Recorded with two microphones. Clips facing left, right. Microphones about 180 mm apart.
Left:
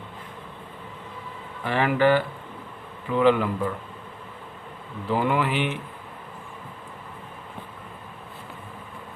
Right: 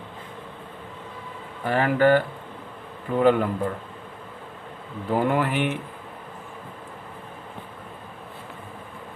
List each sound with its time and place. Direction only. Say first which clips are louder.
1.6 s speech: right 1 dB; 40° right (ahead or behind)
5.0 s speech: right 1 dB; 50° right (ahead or behind)